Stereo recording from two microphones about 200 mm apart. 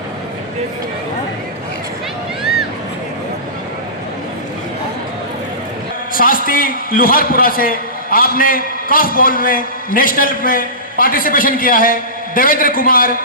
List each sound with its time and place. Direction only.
6.1 s a man's voice: 45° left (ahead or behind)